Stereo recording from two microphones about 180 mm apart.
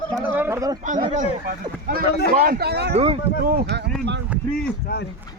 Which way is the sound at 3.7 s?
70° right (ahead or behind).